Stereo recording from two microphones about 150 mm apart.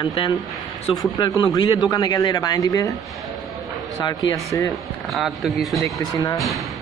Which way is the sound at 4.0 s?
25° left (ahead or behind).